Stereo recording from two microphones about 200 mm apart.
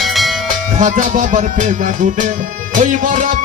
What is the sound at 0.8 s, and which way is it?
Music, 40° right (ahead or behind).